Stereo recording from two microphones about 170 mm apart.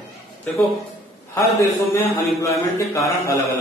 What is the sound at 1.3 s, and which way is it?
A man's voice, 15° left (ahead or behind).